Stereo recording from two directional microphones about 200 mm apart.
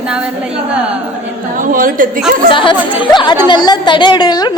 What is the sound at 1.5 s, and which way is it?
Speech, 45° right (ahead or behind).